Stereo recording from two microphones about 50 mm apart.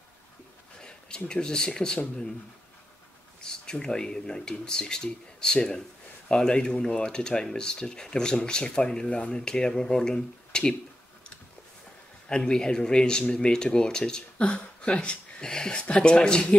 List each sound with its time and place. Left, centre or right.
0.7 s a sound: centre
1.2 s speech: centre
3.3 s speech: centre
12.3 s speech: centre